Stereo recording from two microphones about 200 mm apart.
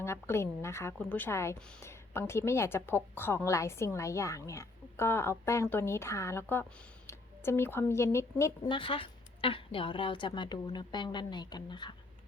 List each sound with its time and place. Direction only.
0.0 s a woman's voice: 10° left (ahead or behind)
8.7 s a woman's voice: 25° left (ahead or behind)